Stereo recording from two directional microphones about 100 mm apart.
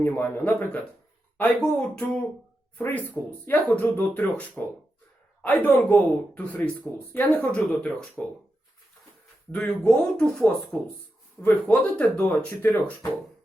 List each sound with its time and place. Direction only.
0.0 s speech: 20° left (ahead or behind)
9.5 s speech: 10° left (ahead or behind)
11.4 s speech: 25° left (ahead or behind)
11.7 s speech: 15° left (ahead or behind)